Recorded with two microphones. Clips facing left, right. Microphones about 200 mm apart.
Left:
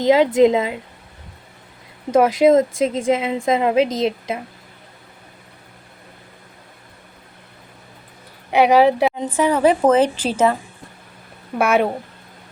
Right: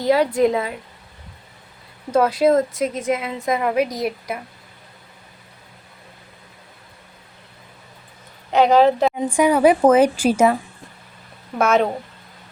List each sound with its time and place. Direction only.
0.0 s a woman's voice: 20° left (ahead or behind)
2.1 s a woman's voice: 20° left (ahead or behind)
8.4 s a woman's voice: 10° left (ahead or behind)
9.0 s a woman's voice: 10° right (ahead or behind)
11.5 s a woman's voice: 10° left (ahead or behind)